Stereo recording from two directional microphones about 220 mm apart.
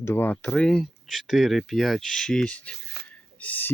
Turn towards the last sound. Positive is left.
turn(degrees=5)  # may be behind; listen again after turning